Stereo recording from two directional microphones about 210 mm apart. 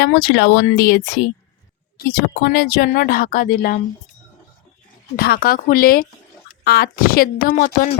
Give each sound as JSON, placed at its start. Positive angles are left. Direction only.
{"t": 0.0, "sound": "speech", "side_deg": 50}
{"t": 5.1, "sound": "speech", "side_deg": 45}